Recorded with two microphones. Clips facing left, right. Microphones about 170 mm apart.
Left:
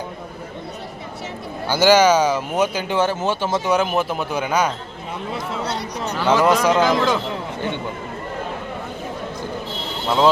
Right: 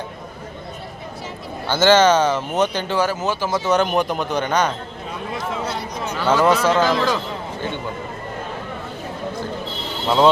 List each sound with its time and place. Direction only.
1.6 s speech: 10° left (ahead or behind)
2.9 s speech: 25° left (ahead or behind)
3.7 s speech: 5° left (ahead or behind)
5.6 s a sound: 70° left (ahead or behind)
6.1 s speech: 10° left (ahead or behind)